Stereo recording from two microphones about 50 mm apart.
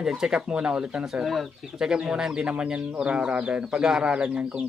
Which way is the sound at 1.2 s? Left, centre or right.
Centre.